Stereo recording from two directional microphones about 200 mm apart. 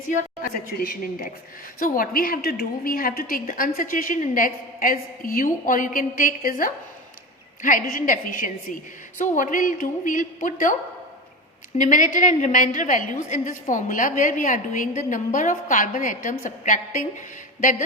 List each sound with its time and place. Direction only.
0.4 s a woman's voice: 45° left (ahead or behind)
11.8 s a woman's voice: 40° left (ahead or behind)